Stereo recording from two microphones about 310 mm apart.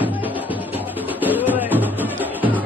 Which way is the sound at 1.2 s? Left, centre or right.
Centre.